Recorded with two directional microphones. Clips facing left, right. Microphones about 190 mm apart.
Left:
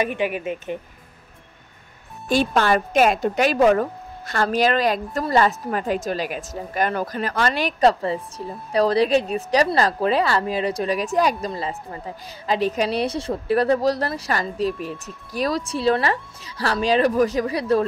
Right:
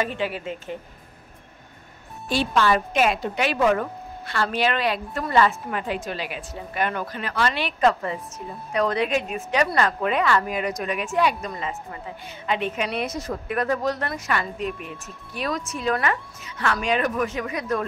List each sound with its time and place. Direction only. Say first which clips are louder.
0.0 s speech: left 3 dB; 15° left (ahead or behind)
2.2 s a woman's voice: left 2 dB; 50° left (ahead or behind); by 17.8 s 30° left (ahead or behind)